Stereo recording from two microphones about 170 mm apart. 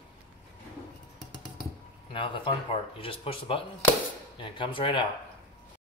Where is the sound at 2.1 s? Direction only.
30° left (ahead or behind).